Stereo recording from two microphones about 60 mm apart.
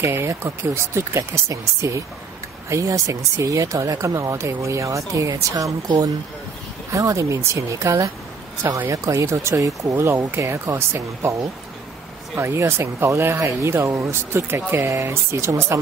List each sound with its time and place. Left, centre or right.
0.0 s speech: right
6.9 s speech: right
9.2 s speech: right
9.6 s speech: right
9.9 s speech: right
12.4 s speech: right
14.3 s speech: right